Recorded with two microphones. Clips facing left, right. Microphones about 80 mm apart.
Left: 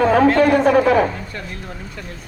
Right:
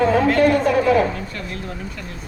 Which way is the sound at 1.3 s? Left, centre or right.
Left.